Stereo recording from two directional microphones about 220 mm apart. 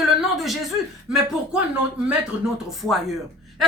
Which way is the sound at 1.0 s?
5° right (ahead or behind).